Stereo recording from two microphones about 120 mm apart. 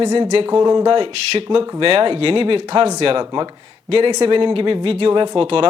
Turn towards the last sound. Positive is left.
turn(degrees=-50)  # may be behind; listen again after turning